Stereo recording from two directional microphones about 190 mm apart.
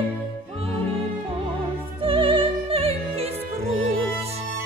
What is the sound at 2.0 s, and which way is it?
Music, 30° right (ahead or behind).